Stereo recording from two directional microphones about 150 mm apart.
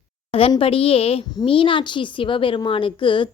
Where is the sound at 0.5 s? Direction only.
40° left (ahead or behind).